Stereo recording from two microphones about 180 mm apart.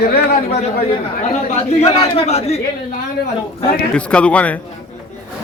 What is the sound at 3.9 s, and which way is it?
Speech, 5° left (ahead or behind).